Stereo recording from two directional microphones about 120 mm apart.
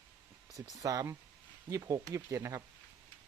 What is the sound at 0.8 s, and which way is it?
Speech, 30° right (ahead or behind).